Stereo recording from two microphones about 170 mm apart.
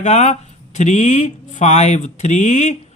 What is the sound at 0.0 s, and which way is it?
Speech, 45° left (ahead or behind).